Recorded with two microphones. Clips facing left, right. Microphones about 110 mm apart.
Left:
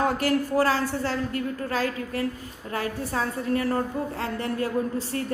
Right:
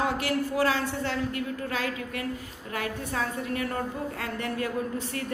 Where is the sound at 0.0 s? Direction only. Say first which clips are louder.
Left 4 dB; 40° left (ahead or behind).